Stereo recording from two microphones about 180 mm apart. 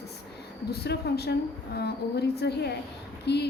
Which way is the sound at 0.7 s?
65° left (ahead or behind).